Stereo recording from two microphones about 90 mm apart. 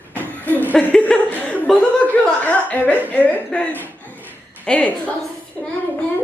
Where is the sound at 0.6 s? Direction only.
20° left (ahead or behind).